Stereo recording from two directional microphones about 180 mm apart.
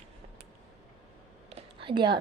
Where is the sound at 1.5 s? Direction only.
30° right (ahead or behind).